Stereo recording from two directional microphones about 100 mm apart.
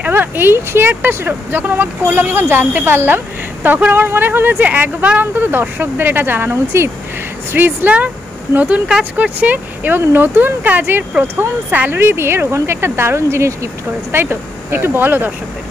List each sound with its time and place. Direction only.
0.0 s speech: 20° right (ahead or behind)